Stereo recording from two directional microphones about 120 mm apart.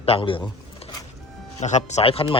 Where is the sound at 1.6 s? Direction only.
70° left (ahead or behind); by 2.3 s 50° left (ahead or behind).